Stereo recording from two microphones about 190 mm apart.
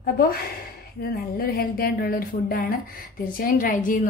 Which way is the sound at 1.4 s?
50° left (ahead or behind).